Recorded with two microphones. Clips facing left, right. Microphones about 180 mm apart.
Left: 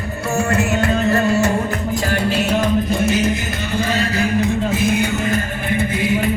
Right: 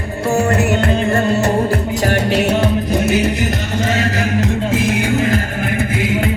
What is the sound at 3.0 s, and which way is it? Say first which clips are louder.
Music: right 2 dB; 65° right (ahead or behind).